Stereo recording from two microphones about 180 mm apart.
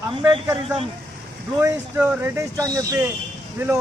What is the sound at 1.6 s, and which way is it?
Speech, 15° right (ahead or behind).